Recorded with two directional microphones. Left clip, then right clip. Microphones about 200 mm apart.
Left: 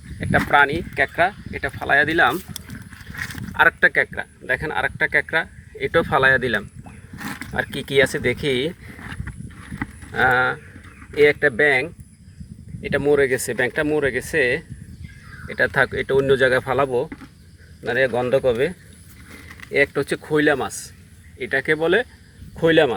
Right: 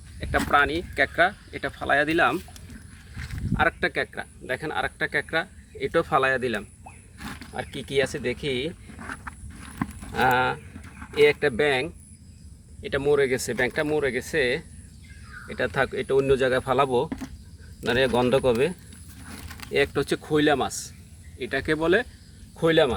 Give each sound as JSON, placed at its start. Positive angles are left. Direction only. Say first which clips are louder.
{"t": 0.2, "sound": "speech", "louder": "left 5 dB", "side_deg": 5}
{"t": 0.9, "sound": "speech", "louder": "left 2 dB", "side_deg": -5}
{"t": 3.6, "sound": "speech", "louder": "left 8 dB", "side_deg": 5}
{"t": 10.2, "sound": "speech", "louder": "left 4 dB", "side_deg": 0}
{"t": 16.7, "sound": "speech", "louder": "left 2 dB", "side_deg": -5}
{"t": 22.5, "sound": "speech", "louder": "left 4 dB", "side_deg": 10}